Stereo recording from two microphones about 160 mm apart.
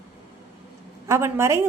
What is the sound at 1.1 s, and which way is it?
Speech, 15° right (ahead or behind).